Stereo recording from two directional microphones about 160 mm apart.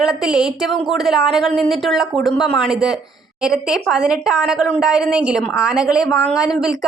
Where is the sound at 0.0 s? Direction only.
5° right (ahead or behind).